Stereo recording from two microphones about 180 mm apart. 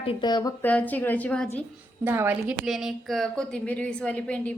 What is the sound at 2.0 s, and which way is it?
A woman's voice, 10° right (ahead or behind).